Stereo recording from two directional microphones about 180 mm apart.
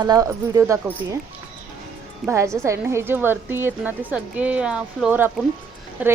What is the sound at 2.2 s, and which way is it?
Speech, 15° right (ahead or behind).